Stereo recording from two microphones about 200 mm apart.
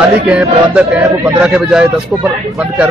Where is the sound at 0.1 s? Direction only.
5° right (ahead or behind).